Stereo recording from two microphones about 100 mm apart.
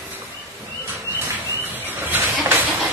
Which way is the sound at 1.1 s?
25° right (ahead or behind).